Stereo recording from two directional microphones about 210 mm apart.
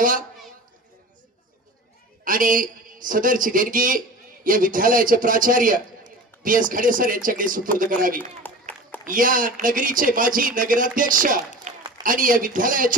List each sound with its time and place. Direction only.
2.2 s speech: 40° right (ahead or behind)
8.2 s a sound: 10° left (ahead or behind)
9.0 s a man's voice: 40° right (ahead or behind)